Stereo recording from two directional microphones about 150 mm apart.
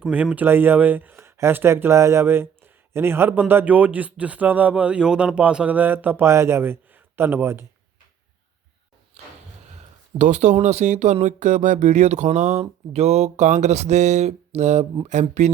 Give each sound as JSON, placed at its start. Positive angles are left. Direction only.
{"t": 0.0, "sound": "speech", "side_deg": -10}
{"t": 10.2, "sound": "speech", "side_deg": -50}